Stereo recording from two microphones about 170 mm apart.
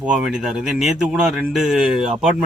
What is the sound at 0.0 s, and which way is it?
Speech, 5° right (ahead or behind).